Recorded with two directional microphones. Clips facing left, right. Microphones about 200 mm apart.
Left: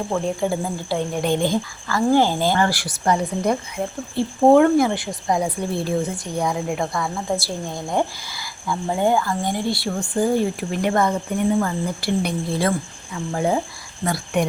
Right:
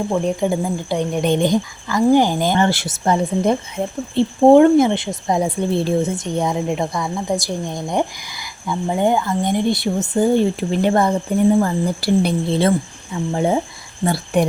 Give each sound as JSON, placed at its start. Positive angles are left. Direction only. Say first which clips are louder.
{"t": 0.1, "sound": "speech", "louder": "right 2 dB", "side_deg": -20}